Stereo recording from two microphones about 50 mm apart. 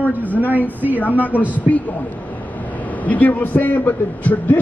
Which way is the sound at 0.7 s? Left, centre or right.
Right.